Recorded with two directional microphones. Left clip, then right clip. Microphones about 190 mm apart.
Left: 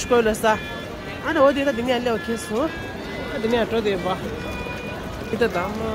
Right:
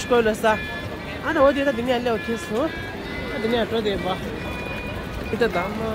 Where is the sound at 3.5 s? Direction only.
10° left (ahead or behind).